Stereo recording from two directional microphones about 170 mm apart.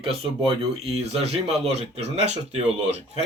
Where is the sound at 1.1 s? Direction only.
35° right (ahead or behind).